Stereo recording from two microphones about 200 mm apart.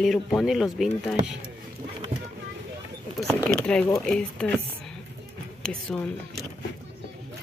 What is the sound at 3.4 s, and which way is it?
Speech, 5° left (ahead or behind).